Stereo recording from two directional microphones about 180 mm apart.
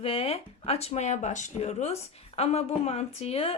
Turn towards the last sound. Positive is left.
turn(degrees=35)  # may be behind; listen again after turning